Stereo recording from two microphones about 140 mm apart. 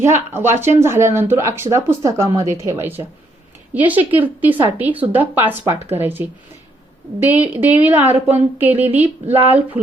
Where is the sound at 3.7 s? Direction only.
10° right (ahead or behind).